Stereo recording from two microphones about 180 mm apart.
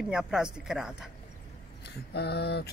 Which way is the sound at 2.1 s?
65° left (ahead or behind).